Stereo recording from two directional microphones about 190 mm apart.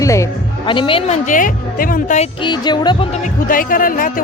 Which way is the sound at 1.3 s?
45° left (ahead or behind).